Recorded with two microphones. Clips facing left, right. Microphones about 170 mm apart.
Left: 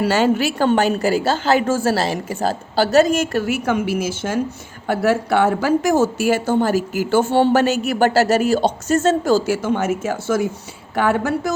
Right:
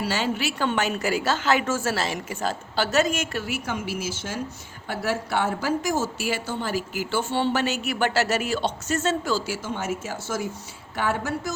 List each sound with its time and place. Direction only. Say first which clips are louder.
0.0 s a woman's voice: left 9 dB; 50° left (ahead or behind)